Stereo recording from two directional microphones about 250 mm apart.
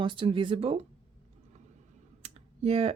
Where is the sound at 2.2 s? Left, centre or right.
Right.